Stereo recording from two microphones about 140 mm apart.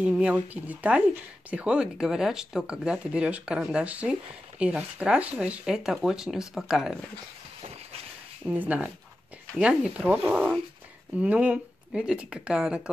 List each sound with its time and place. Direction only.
0.0 s speech: 10° right (ahead or behind)
8.5 s speech: 10° right (ahead or behind)